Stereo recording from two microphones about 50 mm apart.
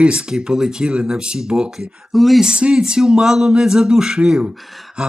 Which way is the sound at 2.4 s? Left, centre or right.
Centre.